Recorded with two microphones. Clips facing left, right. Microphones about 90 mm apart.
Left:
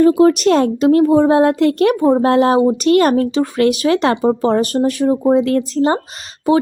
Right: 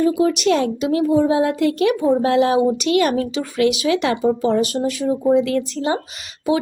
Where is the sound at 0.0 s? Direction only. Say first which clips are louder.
Left 6 dB; 50° left (ahead or behind).